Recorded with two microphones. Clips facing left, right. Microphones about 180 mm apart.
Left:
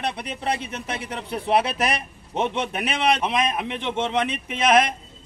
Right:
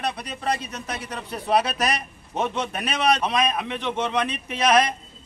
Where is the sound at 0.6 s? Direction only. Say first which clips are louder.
Left 2 dB; 25° left (ahead or behind).